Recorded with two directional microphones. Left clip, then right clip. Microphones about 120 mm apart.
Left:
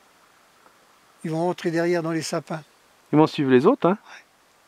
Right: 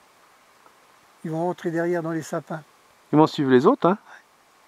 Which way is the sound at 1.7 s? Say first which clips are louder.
Left 2 dB; 45° left (ahead or behind).